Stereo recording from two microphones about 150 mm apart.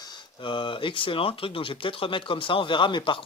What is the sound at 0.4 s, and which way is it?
Speech, 35° left (ahead or behind).